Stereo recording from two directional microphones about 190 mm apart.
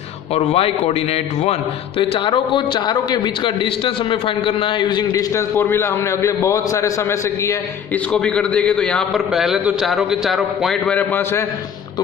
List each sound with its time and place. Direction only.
0.3 s a man's voice: 30° left (ahead or behind); by 11.4 s 10° left (ahead or behind)